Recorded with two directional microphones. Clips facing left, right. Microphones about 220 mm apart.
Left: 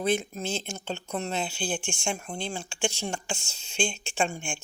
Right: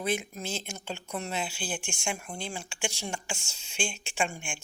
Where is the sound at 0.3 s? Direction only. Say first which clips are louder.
Left 4 dB; 25° left (ahead or behind).